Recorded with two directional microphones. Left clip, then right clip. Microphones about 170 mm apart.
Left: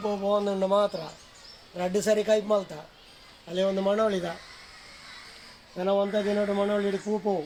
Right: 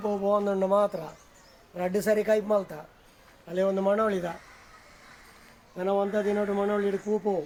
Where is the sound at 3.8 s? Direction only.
30° left (ahead or behind).